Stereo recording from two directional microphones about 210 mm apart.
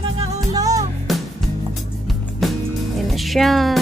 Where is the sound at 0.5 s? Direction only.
15° right (ahead or behind).